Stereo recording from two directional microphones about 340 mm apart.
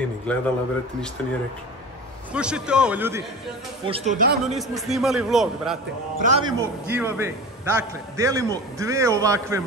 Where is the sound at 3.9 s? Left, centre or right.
Right.